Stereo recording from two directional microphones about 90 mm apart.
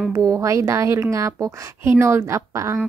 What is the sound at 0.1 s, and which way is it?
A woman's voice, 40° right (ahead or behind).